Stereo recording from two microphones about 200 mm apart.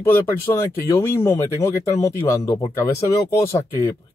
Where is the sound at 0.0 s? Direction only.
10° left (ahead or behind).